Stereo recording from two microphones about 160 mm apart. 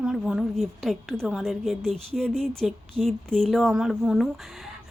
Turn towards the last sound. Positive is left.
turn(degrees=0)  # may be behind; listen again after turning